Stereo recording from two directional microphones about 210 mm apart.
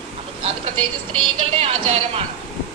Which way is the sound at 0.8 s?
25° right (ahead or behind).